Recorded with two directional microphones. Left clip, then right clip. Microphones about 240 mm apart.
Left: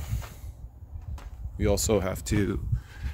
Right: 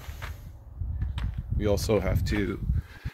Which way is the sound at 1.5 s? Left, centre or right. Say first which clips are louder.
Even; centre.